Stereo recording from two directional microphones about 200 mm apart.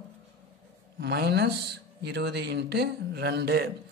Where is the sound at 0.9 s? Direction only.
55° right (ahead or behind).